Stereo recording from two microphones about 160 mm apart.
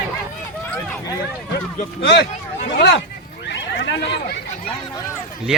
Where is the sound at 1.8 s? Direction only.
90° left.